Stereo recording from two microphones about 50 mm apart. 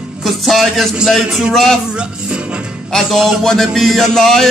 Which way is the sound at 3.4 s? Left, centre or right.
Centre.